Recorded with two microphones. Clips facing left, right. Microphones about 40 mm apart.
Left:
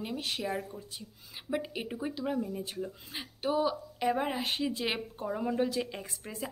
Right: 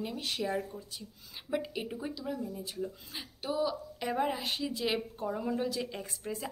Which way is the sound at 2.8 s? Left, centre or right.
Centre.